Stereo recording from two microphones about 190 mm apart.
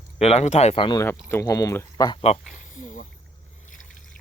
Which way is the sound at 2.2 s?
35° left (ahead or behind).